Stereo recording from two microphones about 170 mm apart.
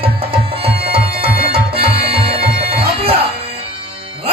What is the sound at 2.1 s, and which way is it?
Bagpipes, 35° right (ahead or behind).